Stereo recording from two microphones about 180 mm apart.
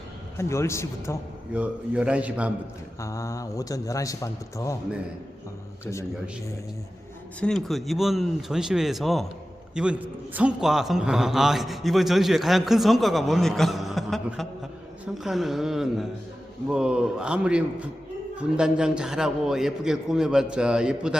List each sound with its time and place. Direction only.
0.3 s a man's voice: 15° left (ahead or behind)
1.5 s a man's voice: 5° right (ahead or behind)
3.0 s a man's voice: 15° left (ahead or behind)
5.8 s a man's voice: 15° left (ahead or behind)
7.3 s a man's voice: 5° left (ahead or behind)